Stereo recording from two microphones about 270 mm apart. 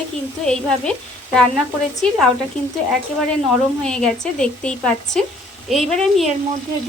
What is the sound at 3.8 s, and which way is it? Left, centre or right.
A woman's voice, centre.